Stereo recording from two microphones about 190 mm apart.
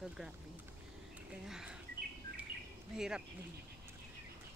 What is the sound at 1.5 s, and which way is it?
Speech, 5° right (ahead or behind).